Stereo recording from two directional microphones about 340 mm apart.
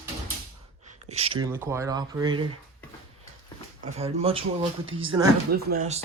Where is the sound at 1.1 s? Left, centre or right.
Centre.